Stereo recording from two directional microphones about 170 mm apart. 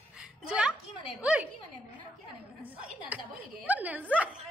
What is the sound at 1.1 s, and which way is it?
Speech, 5° right (ahead or behind).